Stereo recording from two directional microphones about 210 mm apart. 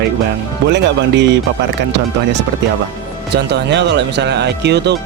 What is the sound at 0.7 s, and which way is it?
Speech, 55° right (ahead or behind).